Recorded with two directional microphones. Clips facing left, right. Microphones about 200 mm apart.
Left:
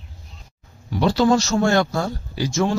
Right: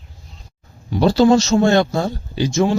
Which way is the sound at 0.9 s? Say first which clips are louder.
Right 4 dB; 30° right (ahead or behind).